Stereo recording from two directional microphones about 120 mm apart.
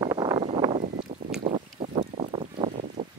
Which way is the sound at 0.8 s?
90° right.